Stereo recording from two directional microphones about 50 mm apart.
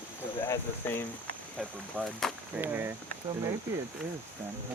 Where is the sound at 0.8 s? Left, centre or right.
Left.